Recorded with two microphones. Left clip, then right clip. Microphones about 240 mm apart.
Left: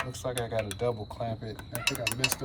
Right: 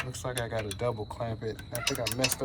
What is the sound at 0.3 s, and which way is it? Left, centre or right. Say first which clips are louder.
Speech: left 1 dB; centre.